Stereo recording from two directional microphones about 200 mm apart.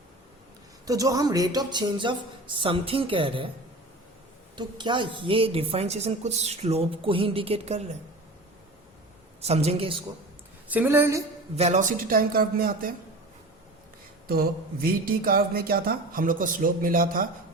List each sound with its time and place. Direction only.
0.9 s a woman's voice: 15° right (ahead or behind)
4.5 s a woman's voice: 25° right (ahead or behind)
9.4 s a woman's voice: 30° right (ahead or behind)
10.7 s a woman's voice: 10° right (ahead or behind)
11.5 s speech: 35° right (ahead or behind)
14.3 s speech: 50° right (ahead or behind)